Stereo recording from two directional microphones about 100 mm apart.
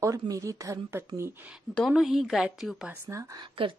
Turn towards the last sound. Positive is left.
turn(degrees=-65)  # may be behind; listen again after turning